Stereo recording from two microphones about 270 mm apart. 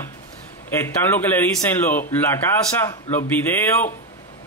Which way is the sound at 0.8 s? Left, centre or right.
Centre.